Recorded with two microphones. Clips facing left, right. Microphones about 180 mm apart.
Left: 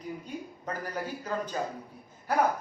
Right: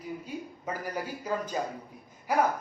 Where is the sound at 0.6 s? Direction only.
10° right (ahead or behind).